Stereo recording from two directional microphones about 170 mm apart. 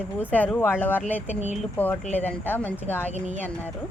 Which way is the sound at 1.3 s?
40° left (ahead or behind).